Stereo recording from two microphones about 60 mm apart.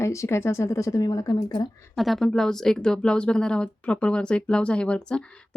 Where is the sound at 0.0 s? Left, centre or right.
Left.